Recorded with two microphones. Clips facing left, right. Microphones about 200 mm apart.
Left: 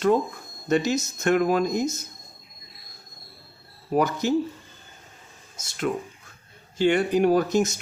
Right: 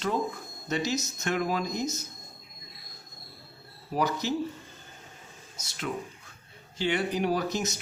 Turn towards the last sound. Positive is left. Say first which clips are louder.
# left 8 dB
turn(degrees=50)  # may be behind; listen again after turning